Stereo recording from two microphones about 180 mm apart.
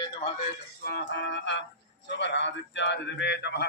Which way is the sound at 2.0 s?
75° left (ahead or behind).